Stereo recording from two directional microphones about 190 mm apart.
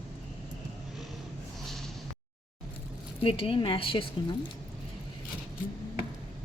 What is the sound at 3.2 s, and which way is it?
Speech, 30° left (ahead or behind).